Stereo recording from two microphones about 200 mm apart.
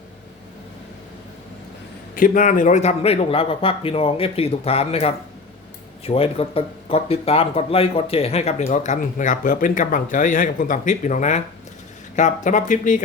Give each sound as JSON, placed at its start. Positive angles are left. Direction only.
{"t": 2.1, "sound": "speech", "side_deg": 45}